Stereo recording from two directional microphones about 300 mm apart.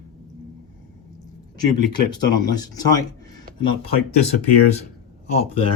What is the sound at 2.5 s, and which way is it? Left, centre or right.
Speech, centre.